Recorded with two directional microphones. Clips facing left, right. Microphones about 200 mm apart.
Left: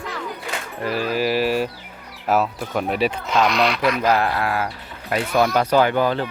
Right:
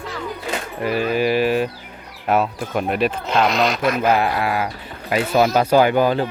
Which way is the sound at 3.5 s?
45° right (ahead or behind).